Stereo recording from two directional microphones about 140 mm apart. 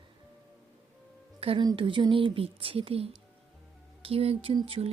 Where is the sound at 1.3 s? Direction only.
45° right (ahead or behind).